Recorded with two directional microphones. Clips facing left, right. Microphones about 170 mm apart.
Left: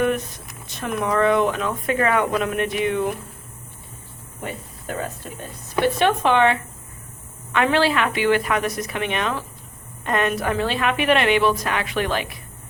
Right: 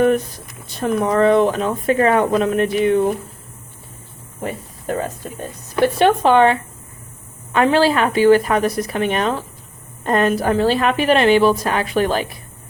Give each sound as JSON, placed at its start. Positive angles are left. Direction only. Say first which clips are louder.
{"t": 0.8, "sound": "speech", "louder": "right 5 dB", "side_deg": -30}
{"t": 6.0, "sound": "speech", "louder": "right 6 dB", "side_deg": -35}